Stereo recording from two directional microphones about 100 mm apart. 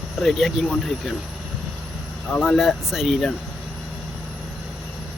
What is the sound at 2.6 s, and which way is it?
Speech, 5° right (ahead or behind).